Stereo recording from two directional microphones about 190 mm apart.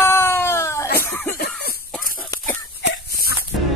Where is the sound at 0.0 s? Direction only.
10° left (ahead or behind).